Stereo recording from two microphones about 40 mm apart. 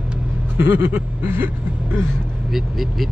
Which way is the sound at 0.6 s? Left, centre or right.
Right.